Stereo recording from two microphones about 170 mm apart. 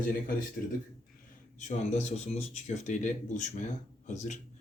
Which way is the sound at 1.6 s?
45° left (ahead or behind).